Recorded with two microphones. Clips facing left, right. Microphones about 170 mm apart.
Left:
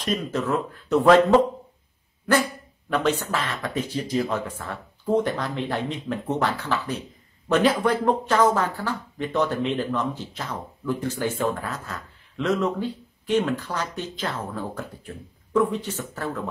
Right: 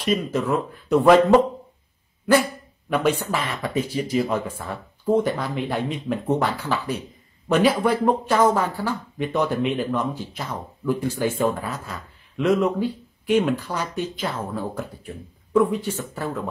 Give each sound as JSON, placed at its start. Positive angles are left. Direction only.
{"t": 0.0, "sound": "speech", "side_deg": -10}
{"t": 2.9, "sound": "speech", "side_deg": -10}